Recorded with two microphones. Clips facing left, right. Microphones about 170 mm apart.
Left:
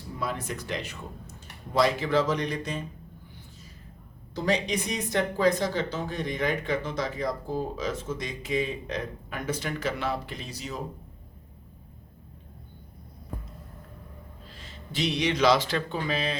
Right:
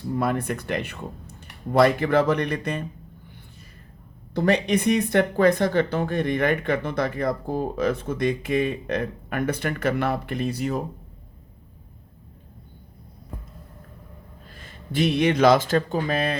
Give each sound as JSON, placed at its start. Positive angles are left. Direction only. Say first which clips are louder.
{"t": 0.2, "sound": "speech", "louder": "right 6 dB", "side_deg": -55}
{"t": 4.4, "sound": "speech", "louder": "right 6 dB", "side_deg": -60}
{"t": 14.5, "sound": "speech", "louder": "right 8 dB", "side_deg": -50}